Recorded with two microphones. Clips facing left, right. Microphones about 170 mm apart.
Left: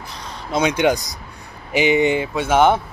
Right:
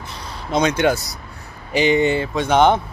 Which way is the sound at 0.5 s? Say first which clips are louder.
Even; 10° left (ahead or behind).